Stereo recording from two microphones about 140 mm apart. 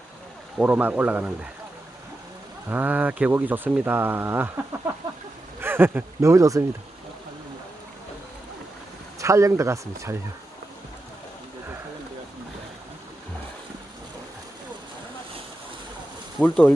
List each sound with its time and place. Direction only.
0.6 s speech: 10° right (ahead or behind)
2.6 s speech: 15° right (ahead or behind)
9.2 s speech: 20° right (ahead or behind)
16.4 s speech: 10° left (ahead or behind)